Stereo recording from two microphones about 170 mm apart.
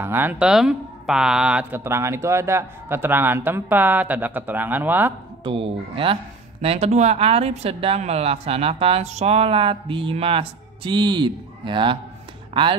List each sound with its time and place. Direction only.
0.0 s speech: 10° right (ahead or behind)
5.4 s speech: 30° right (ahead or behind)